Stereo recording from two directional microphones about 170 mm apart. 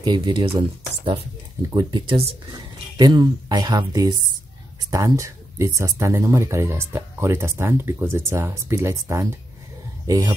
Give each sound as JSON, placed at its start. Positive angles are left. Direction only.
{"t": 0.0, "sound": "speech", "side_deg": -25}